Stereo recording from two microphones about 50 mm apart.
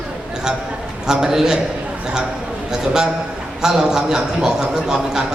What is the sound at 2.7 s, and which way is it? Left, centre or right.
A man's voice, centre.